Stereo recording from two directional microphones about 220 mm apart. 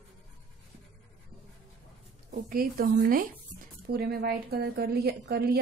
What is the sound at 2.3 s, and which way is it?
A woman's voice, 40° right (ahead or behind).